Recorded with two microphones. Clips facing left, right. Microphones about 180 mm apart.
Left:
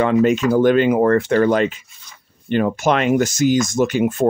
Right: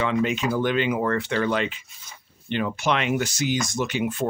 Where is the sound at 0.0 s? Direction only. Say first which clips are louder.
Left 8 dB; 45° left (ahead or behind).